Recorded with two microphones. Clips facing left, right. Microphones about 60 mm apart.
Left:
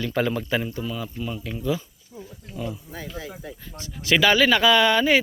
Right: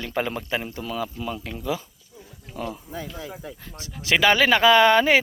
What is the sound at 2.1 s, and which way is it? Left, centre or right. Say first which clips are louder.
Wild animals: left 6 dB; left.